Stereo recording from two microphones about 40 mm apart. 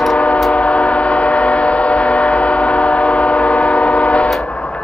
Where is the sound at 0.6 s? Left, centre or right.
Left.